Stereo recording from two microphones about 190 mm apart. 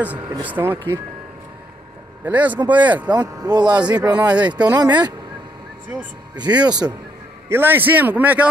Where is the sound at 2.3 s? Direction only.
10° right (ahead or behind).